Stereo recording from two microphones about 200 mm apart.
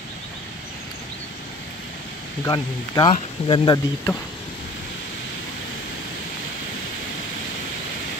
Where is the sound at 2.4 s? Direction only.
20° left (ahead or behind).